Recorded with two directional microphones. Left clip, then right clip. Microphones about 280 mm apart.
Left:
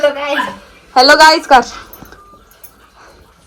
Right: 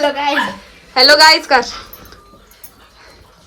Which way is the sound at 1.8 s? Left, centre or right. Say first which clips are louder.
Left 1 dB; centre.